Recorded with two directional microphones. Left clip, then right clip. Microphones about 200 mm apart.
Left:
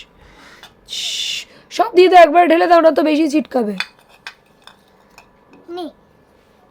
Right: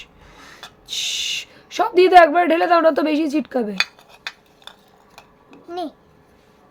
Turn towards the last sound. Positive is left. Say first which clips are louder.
# even
turn(degrees=-15)  # may be behind; listen again after turning